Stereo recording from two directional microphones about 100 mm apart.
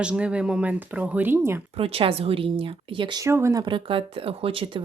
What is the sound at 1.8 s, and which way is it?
Speech, 70° right (ahead or behind).